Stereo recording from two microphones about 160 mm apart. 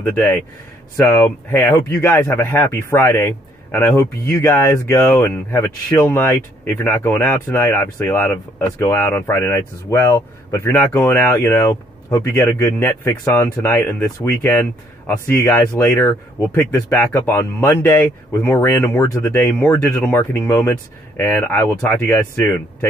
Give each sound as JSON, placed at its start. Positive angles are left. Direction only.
{"t": 0.0, "sound": "speech", "side_deg": 10}